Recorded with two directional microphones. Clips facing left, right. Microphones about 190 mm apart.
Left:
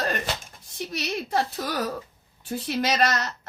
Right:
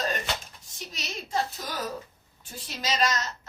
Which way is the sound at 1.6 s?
65° left (ahead or behind).